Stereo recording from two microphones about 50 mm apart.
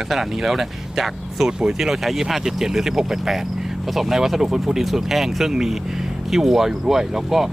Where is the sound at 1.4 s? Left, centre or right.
Centre.